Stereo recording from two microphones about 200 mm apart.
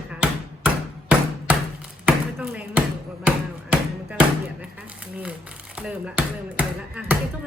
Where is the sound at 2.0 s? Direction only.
5° right (ahead or behind).